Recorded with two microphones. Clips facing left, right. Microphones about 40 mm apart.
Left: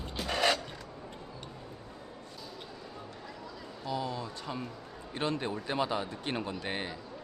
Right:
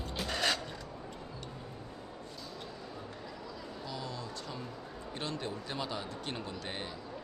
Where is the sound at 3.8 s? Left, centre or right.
Left.